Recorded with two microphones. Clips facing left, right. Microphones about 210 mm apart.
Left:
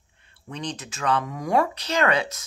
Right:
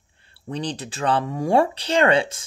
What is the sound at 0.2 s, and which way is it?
Speech, 35° right (ahead or behind).